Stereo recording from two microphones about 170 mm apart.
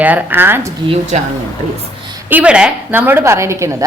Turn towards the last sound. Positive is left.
turn(degrees=-15)  # may be behind; listen again after turning